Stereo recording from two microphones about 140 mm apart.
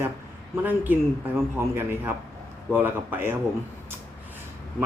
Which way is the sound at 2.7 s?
15° right (ahead or behind).